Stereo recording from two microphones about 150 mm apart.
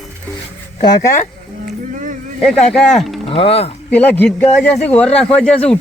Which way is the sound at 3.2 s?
40° left (ahead or behind).